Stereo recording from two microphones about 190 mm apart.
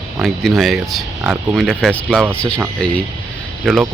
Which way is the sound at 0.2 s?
Centre (ahead or behind).